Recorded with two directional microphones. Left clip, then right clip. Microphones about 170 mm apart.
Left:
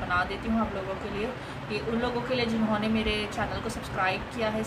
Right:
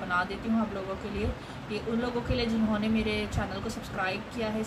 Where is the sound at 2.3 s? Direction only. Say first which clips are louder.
Left 2 dB; 5° right (ahead or behind).